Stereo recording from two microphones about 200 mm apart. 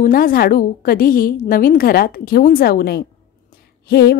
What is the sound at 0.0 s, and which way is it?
A woman's voice, 45° left (ahead or behind).